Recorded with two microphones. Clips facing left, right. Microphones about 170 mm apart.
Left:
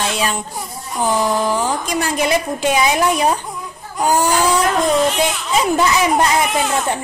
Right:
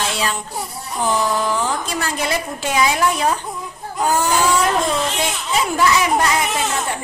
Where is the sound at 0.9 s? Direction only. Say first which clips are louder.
Left 2 dB; 20° left (ahead or behind).